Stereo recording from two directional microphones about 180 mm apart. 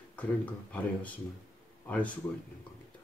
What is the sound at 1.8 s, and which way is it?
Speech, 10° left (ahead or behind).